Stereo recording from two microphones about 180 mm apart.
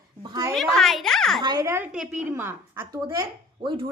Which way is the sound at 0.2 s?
20° right (ahead or behind).